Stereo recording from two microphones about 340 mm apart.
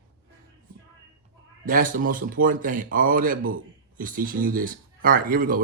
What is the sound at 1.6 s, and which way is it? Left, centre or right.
A man's voice, right.